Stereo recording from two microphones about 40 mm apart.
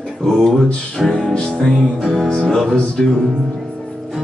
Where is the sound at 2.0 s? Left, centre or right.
Centre.